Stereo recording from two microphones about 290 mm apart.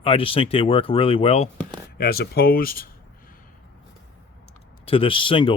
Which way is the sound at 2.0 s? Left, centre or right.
Left.